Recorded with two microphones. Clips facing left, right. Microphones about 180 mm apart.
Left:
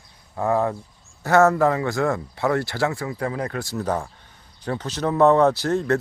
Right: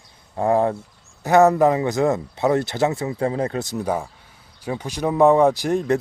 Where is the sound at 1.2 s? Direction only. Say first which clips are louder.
Right 2 dB; 15° right (ahead or behind).